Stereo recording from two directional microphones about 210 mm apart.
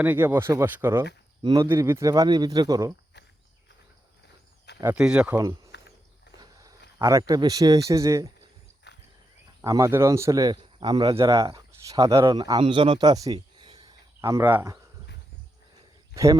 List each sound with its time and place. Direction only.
0.0 s speech: 10° right (ahead or behind)
4.8 s speech: 5° right (ahead or behind)
6.4 s a sound: 15° right (ahead or behind)
7.0 s speech: 15° right (ahead or behind)
8.9 s horse: 55° left (ahead or behind)
9.6 s speech: 15° right (ahead or behind)
16.1 s speech: 15° right (ahead or behind)